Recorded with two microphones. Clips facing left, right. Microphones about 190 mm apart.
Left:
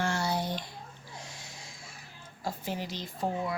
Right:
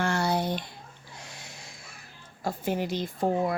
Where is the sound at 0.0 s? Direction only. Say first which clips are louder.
Right 4 dB; 60° right (ahead or behind).